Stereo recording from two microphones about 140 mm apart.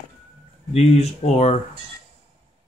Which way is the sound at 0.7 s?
50° left (ahead or behind).